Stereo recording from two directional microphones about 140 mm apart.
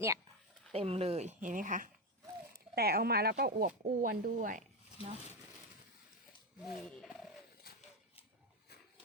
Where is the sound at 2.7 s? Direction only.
90° right; by 4.7 s 70° right (ahead or behind).